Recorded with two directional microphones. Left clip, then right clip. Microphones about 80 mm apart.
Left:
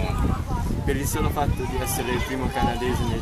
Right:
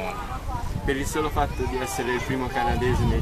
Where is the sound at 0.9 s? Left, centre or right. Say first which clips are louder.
Right 2 dB; centre.